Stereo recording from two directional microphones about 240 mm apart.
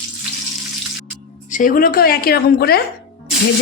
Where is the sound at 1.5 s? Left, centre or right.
Left.